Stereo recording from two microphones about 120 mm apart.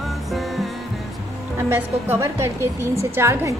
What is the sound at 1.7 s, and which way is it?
Speech, 20° right (ahead or behind).